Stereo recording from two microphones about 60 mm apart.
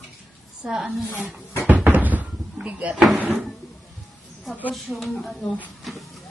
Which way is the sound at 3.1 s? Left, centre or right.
Right.